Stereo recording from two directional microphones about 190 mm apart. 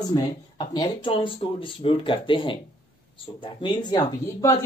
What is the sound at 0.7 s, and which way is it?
Speech, 25° left (ahead or behind).